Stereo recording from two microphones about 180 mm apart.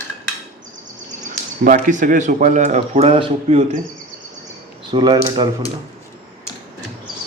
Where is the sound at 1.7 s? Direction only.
45° right (ahead or behind).